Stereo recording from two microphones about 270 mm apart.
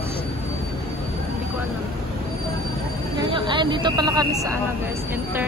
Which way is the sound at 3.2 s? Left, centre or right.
Centre.